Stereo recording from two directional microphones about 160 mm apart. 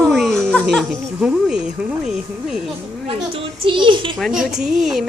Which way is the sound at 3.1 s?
30° right (ahead or behind).